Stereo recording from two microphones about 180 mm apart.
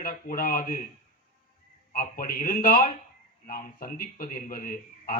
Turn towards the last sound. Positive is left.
turn(degrees=50)  # may be behind; listen again after turning